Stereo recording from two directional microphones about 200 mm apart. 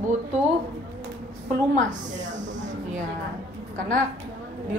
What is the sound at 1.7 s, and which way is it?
A woman's voice, 40° right (ahead or behind).